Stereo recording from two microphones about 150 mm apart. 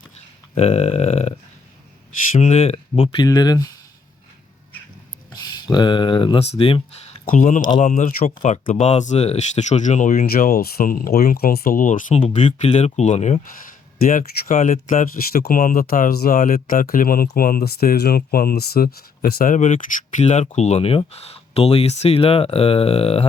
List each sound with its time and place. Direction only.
0.5 s a sound: 45° left (ahead or behind)
2.4 s speech: 45° left (ahead or behind)
3.2 s speech: 25° left (ahead or behind)
5.3 s speech: 25° left (ahead or behind)
7.3 s speech: 60° left (ahead or behind); by 19.5 s 85° left
19.5 s speech: 55° left (ahead or behind)